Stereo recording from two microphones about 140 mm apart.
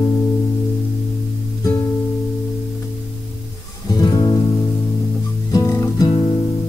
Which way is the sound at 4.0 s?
25° left (ahead or behind).